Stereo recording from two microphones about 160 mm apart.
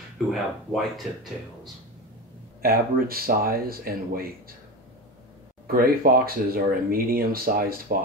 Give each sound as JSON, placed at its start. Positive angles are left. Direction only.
{"t": 0.3, "sound": "speech", "side_deg": 0}
{"t": 2.6, "sound": "speech", "side_deg": -65}
{"t": 5.7, "sound": "speech", "side_deg": -65}